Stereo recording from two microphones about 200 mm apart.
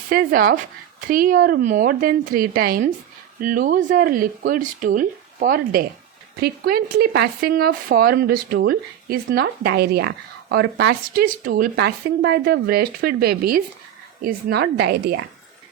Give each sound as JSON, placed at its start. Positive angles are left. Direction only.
{"t": 0.1, "sound": "speech", "side_deg": -45}